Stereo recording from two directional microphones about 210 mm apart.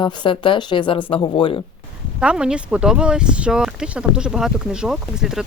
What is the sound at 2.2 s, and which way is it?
Speech, 5° right (ahead or behind).